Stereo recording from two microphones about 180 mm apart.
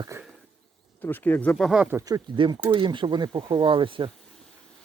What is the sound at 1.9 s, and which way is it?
Speech, 20° right (ahead or behind).